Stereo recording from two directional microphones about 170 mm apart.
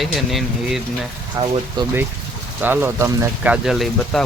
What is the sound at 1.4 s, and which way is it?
Speech, 20° right (ahead or behind).